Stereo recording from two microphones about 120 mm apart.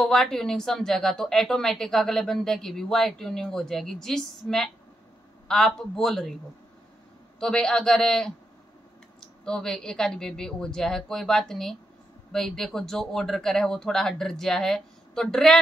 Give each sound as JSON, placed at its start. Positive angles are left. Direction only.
{"t": 0.0, "sound": "a woman's voice", "side_deg": 5}
{"t": 7.3, "sound": "a woman's voice", "side_deg": 5}